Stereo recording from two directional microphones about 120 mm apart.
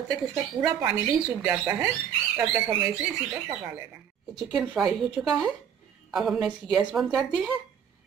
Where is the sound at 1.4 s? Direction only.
15° right (ahead or behind).